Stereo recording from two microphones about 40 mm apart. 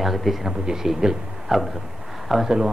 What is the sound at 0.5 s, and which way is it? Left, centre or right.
A man's voice, centre.